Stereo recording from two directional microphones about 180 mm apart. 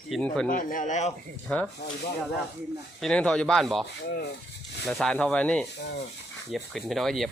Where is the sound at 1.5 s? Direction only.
5° left (ahead or behind).